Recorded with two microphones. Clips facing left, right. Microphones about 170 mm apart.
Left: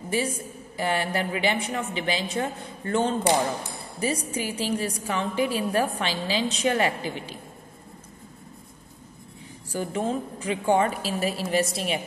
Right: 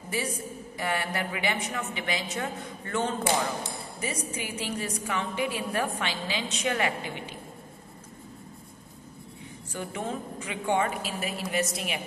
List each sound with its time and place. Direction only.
0.7 s a man's voice: 30° left (ahead or behind)
9.7 s a woman's voice: 35° left (ahead or behind)